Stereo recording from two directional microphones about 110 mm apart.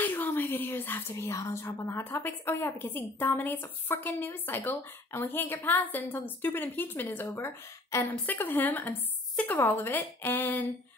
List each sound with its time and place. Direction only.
0.0 s speech: 20° left (ahead or behind)